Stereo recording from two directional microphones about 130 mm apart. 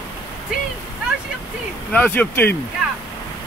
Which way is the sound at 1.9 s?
10° left (ahead or behind).